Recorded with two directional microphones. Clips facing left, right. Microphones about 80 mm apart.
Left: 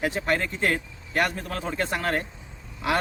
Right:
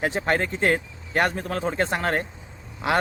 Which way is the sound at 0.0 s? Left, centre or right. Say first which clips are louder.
Right 2 dB; right.